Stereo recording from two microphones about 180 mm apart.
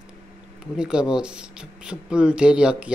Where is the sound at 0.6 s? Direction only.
5° right (ahead or behind).